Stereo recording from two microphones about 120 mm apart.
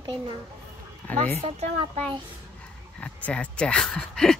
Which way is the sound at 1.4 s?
60° right (ahead or behind).